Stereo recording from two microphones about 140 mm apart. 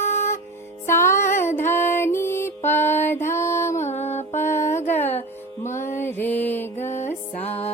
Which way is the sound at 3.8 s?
55° left (ahead or behind).